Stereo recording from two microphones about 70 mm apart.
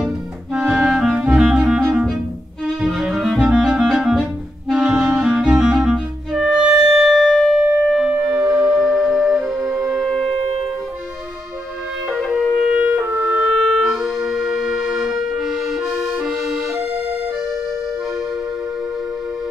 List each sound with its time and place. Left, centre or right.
0.5 s clarinet: centre
1.3 s music: centre
2.8 s cello: centre
3.5 s music: centre
10.0 s wind instrument: centre
12.4 s music: centre
12.7 s clarinet: centre
13.0 s clarinet: right
13.5 s music: centre